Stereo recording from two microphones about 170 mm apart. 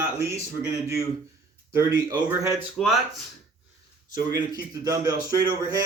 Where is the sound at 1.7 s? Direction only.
25° right (ahead or behind).